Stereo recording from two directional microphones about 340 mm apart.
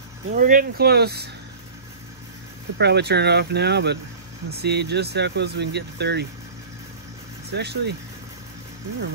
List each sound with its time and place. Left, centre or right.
0.3 s speech: right
2.8 s speech: right
7.5 s speech: right